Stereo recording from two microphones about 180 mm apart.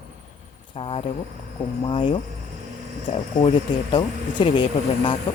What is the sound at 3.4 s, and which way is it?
Speech, 30° left (ahead or behind).